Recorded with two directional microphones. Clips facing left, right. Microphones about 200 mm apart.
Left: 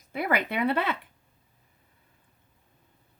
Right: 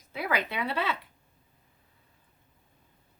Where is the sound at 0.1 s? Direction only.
55° left (ahead or behind).